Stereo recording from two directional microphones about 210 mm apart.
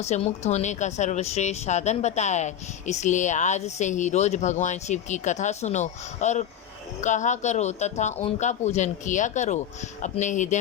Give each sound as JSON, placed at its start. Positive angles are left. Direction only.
{"t": 0.0, "sound": "a woman's voice", "side_deg": 30}